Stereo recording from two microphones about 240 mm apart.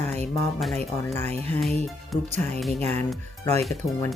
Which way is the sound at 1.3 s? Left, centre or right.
Right.